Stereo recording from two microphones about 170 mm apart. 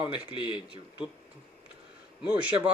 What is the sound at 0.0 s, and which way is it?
Speech, 30° left (ahead or behind).